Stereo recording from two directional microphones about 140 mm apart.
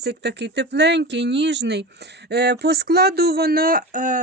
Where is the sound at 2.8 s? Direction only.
90° right; by 4.2 s 70° right (ahead or behind).